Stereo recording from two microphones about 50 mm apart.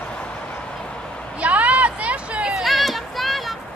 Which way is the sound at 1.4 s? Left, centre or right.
Right.